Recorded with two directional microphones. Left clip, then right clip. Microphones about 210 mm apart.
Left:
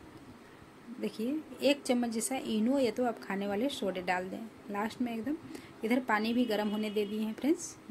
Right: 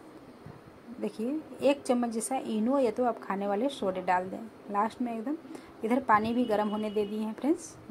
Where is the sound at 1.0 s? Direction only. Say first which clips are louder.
Right 2 dB; centre (ahead or behind).